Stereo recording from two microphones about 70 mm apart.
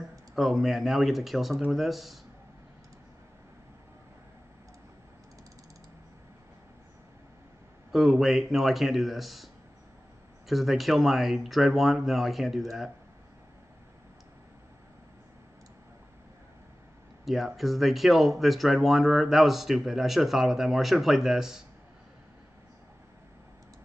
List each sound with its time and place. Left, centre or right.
0.4 s speech: centre
7.9 s speech: centre
10.5 s speech: centre
17.2 s a sound: centre
17.6 s speech: centre